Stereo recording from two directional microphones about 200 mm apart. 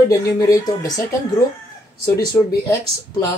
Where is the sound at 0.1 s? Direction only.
15° left (ahead or behind).